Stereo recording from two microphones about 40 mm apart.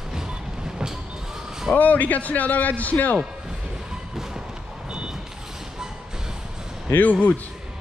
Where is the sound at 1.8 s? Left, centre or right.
Left.